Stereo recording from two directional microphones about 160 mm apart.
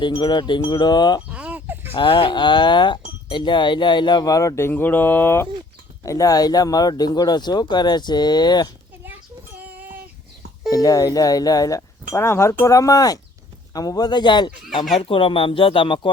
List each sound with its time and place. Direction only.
0.0 s speech: 30° left (ahead or behind)
1.3 s fowl: 10° right (ahead or behind)
1.9 s speech: 30° left (ahead or behind)
10.7 s speech: 20° left (ahead or behind)